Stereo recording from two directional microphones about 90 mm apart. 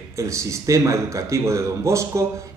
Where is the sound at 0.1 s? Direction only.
35° right (ahead or behind).